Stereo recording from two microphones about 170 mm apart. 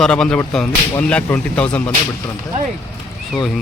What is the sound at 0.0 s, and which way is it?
Speech, 5° left (ahead or behind).